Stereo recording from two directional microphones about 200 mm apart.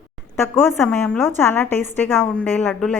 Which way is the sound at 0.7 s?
5° left (ahead or behind).